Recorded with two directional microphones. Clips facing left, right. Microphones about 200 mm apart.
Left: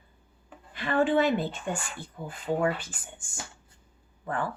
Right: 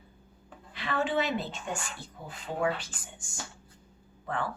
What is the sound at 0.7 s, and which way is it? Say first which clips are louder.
A woman's voice: left 6 dB; 50° left (ahead or behind).